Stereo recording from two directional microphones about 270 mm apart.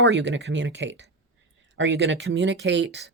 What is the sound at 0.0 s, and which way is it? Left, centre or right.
A woman's voice, right.